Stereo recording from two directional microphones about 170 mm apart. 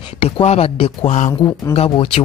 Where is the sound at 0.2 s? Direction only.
40° left (ahead or behind).